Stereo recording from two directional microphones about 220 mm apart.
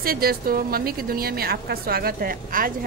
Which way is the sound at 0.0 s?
45° right (ahead or behind).